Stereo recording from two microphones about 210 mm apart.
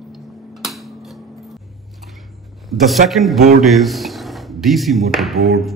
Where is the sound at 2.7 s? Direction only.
Centre (ahead or behind).